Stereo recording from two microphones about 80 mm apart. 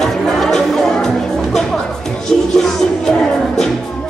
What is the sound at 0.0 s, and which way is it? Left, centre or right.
Music, centre.